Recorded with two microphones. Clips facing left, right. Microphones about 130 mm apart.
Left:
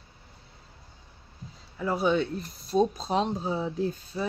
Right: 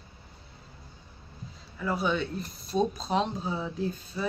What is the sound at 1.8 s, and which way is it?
Speech, 35° left (ahead or behind).